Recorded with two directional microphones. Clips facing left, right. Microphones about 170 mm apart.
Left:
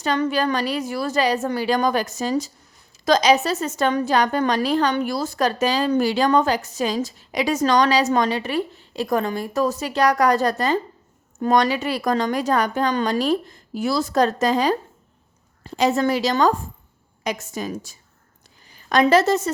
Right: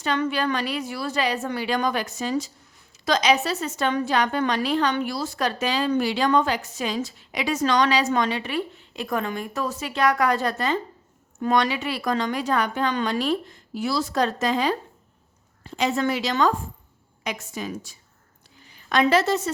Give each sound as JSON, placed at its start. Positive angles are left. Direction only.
{"t": 0.0, "sound": "a woman's voice", "side_deg": 40}